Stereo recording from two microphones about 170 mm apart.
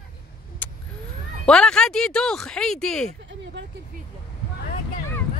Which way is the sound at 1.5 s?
5° left (ahead or behind).